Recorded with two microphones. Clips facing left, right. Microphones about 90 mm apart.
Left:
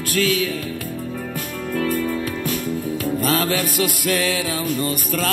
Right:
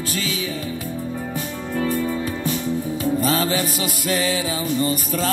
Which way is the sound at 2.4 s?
Centre (ahead or behind).